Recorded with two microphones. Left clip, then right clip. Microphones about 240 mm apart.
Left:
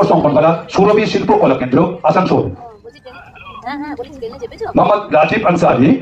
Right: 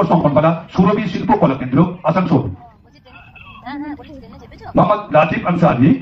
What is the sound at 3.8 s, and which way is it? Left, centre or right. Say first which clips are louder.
A man's voice: left 5 dB; left.